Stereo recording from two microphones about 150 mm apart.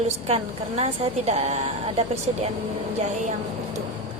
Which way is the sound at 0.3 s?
45° right (ahead or behind).